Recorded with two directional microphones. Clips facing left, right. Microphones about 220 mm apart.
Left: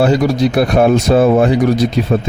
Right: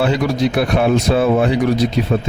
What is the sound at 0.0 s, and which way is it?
Speech, 40° left (ahead or behind).